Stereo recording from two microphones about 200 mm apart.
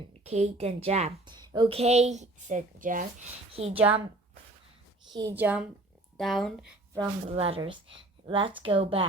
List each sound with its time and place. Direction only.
0.3 s a woman's voice: 30° right (ahead or behind)
3.5 s a woman's voice: 30° right (ahead or behind)
3.8 s a woman's voice: 5° right (ahead or behind)
5.1 s a woman's voice: 15° right (ahead or behind)
6.9 s a woman's voice: 30° right (ahead or behind)